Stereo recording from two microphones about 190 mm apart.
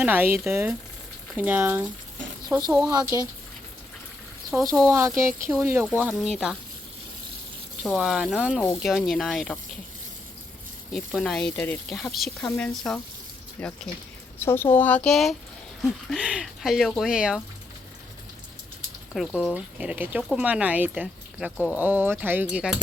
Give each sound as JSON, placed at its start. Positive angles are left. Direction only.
{"t": 0.0, "sound": "speech", "side_deg": -10}
{"t": 4.5, "sound": "speech", "side_deg": -5}
{"t": 4.9, "sound": "speech", "side_deg": -15}
{"t": 7.9, "sound": "speech", "side_deg": 0}
{"t": 10.9, "sound": "speech", "side_deg": 0}
{"t": 19.1, "sound": "speech", "side_deg": 0}